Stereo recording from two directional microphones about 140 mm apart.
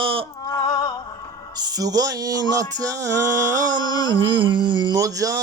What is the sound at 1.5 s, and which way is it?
Speech, 30° right (ahead or behind).